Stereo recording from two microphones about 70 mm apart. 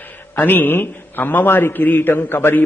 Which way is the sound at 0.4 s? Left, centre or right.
Left.